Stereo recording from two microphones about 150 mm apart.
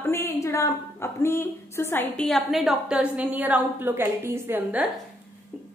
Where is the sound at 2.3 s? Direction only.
Centre (ahead or behind).